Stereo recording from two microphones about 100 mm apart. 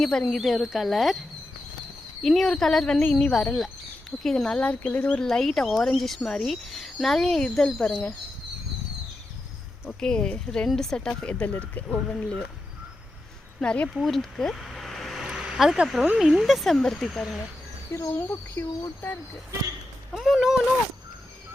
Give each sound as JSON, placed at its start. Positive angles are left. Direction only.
{"t": 0.0, "sound": "speech", "side_deg": 5}
{"t": 2.2, "sound": "speech", "side_deg": 0}
{"t": 10.0, "sound": "speech", "side_deg": 5}
{"t": 13.6, "sound": "speech", "side_deg": 10}
{"t": 18.1, "sound": "speech", "side_deg": 25}
{"t": 20.1, "sound": "a sound", "side_deg": -5}